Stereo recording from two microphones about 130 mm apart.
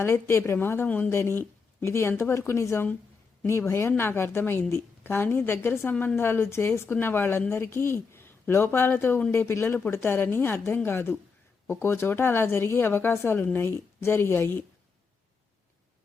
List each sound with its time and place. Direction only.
0.0 s a woman's voice: 20° left (ahead or behind)